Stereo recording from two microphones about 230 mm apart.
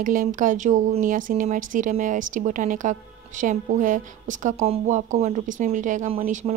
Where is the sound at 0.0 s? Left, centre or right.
Right.